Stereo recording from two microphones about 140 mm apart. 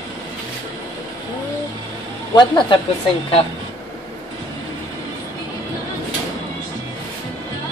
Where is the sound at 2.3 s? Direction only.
35° left (ahead or behind).